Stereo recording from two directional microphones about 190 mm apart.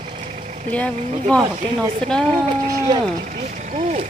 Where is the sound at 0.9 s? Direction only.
40° right (ahead or behind).